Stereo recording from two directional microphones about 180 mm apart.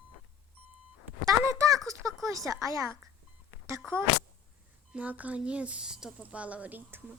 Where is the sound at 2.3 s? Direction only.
20° right (ahead or behind).